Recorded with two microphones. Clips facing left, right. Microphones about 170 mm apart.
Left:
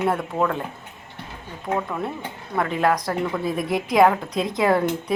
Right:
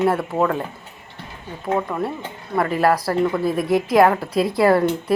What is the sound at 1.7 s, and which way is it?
Speech, 5° right (ahead or behind).